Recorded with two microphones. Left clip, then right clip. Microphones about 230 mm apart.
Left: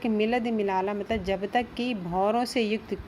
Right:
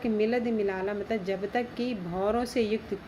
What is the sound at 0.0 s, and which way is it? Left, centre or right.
A woman's voice, left.